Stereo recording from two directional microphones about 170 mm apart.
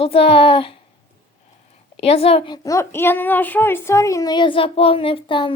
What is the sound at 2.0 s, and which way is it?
Speech, 35° left (ahead or behind).